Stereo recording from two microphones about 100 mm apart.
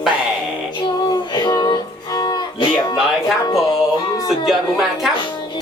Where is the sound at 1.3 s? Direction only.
45° left (ahead or behind).